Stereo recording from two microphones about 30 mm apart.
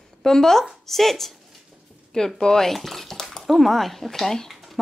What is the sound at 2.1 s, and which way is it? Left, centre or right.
Speech, left.